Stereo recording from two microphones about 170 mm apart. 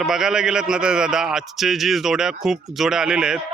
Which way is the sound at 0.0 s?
5° right (ahead or behind).